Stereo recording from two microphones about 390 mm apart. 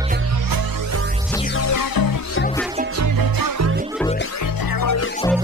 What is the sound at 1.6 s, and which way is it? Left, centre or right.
Music, left.